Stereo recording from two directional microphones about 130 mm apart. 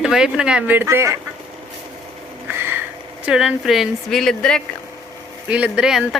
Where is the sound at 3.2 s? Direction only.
5° right (ahead or behind).